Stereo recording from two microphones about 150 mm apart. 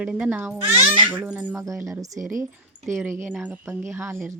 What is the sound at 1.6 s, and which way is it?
Speech, 20° right (ahead or behind).